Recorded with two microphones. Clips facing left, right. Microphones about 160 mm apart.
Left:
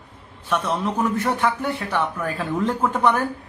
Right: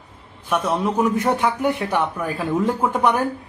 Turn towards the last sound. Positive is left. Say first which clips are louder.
# right 1 dB
turn(degrees=-15)  # may be behind; listen again after turning